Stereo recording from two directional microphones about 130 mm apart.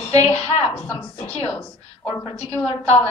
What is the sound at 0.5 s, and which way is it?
Speech, 45° left (ahead or behind).